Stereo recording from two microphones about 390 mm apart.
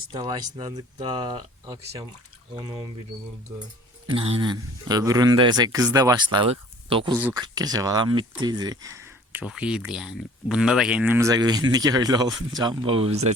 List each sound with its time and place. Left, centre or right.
0.1 s speech: centre
4.1 s speech: centre